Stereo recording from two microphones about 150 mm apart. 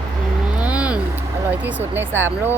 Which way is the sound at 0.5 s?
10° right (ahead or behind).